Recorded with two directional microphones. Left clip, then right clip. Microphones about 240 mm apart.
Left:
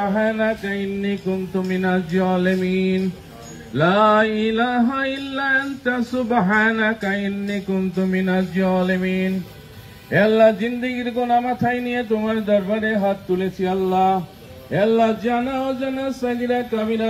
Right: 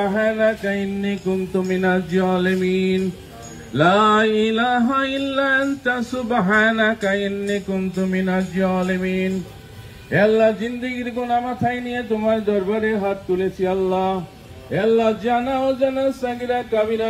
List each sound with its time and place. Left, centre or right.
0.0 s mantra: right
8.0 s music: centre
10.1 s speech: centre; by 14.1 s left
14.7 s a sound: left